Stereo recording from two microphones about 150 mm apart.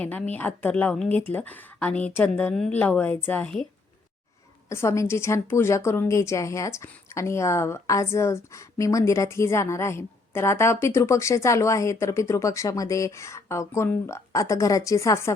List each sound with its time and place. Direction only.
0.0 s speech: 10° left (ahead or behind)
4.7 s a woman's voice: 20° left (ahead or behind)